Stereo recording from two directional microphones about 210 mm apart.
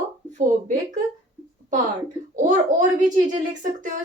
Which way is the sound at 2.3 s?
35° right (ahead or behind).